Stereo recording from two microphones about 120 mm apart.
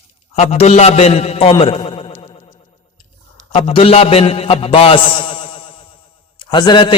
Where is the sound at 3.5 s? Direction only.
50° left (ahead or behind).